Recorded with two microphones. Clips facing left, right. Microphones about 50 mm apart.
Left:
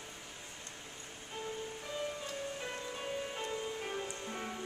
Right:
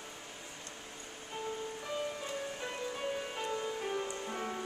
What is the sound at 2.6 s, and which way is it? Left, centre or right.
Music, centre.